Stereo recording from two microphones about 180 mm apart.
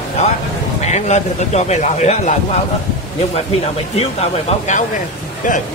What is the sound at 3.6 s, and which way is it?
Speech, 35° left (ahead or behind).